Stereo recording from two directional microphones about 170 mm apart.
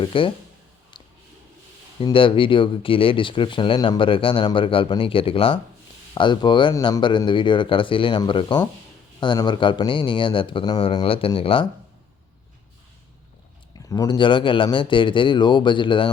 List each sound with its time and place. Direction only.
0.0 s speech: 30° left (ahead or behind)
0.9 s a sound: 25° left (ahead or behind)
2.0 s speech: 30° left (ahead or behind)
13.7 s speech: 20° left (ahead or behind)